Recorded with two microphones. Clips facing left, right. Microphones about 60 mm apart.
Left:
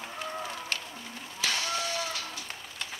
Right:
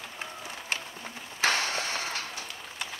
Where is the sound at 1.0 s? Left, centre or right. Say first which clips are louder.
Right 5 dB; right.